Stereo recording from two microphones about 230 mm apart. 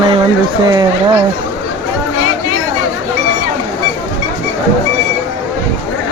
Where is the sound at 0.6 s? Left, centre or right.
Centre.